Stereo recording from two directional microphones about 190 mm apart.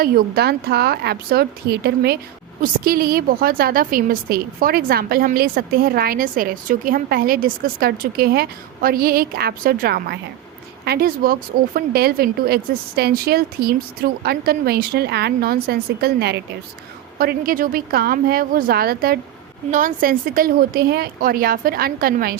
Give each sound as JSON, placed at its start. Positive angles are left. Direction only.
{"t": 0.0, "sound": "a woman's voice", "side_deg": -55}